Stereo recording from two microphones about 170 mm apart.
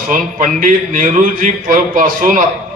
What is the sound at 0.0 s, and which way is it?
A man's voice, 55° right (ahead or behind).